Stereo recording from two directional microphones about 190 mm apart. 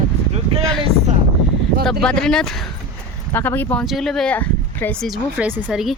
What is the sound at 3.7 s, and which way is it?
Speech, centre (ahead or behind).